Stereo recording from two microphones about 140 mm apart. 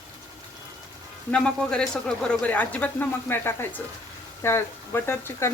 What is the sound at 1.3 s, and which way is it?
Speech, 5° left (ahead or behind).